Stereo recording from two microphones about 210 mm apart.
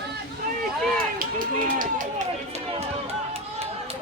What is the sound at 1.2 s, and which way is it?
Run, 40° right (ahead or behind).